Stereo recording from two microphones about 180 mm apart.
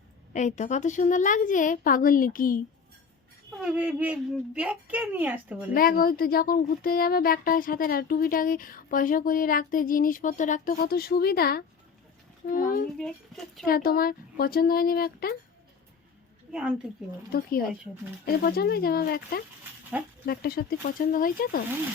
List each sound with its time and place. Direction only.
0.3 s speech: 40° left (ahead or behind)
3.6 s a woman's voice: 10° right (ahead or behind)
5.7 s speech: 55° left (ahead or behind)
13.0 s speech: centre (ahead or behind)
13.7 s speech: 55° left (ahead or behind)
16.5 s speech: 5° right (ahead or behind)
17.3 s speech: 55° left (ahead or behind)